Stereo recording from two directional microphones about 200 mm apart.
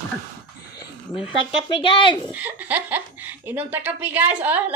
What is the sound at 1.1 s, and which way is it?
Speech, 25° left (ahead or behind).